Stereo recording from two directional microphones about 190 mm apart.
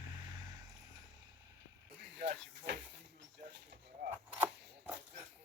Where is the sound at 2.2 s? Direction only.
65° right (ahead or behind).